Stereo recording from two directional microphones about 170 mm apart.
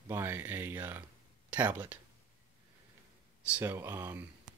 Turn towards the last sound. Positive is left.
turn(degrees=-15)  # may be behind; listen again after turning